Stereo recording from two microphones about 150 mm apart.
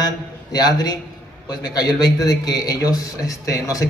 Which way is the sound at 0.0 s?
25° left (ahead or behind).